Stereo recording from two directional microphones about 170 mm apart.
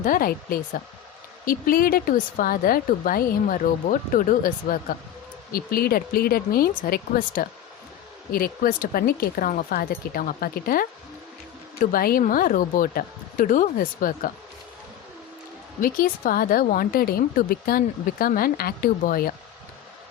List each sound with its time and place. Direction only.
0.0 s a woman's voice: 55° left (ahead or behind)
15.8 s a woman's voice: 55° left (ahead or behind)